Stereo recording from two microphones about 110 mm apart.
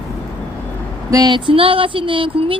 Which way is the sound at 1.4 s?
50° right (ahead or behind).